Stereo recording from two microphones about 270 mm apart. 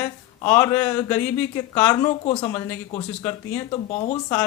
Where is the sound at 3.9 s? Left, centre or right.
Left.